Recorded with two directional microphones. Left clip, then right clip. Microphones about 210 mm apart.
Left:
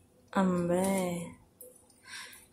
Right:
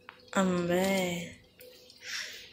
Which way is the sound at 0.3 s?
10° left (ahead or behind).